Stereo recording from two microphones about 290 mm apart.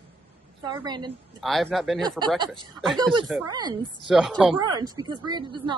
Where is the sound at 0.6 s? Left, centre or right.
Centre.